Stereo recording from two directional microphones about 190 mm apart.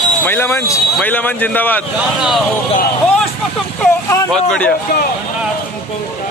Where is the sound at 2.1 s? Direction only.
Centre (ahead or behind).